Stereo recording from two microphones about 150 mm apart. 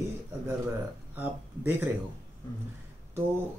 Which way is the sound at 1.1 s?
15° right (ahead or behind).